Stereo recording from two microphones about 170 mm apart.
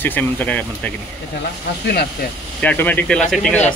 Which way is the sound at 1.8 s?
70° left (ahead or behind).